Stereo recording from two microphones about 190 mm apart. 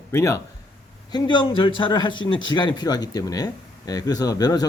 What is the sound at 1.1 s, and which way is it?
Speech, 25° left (ahead or behind).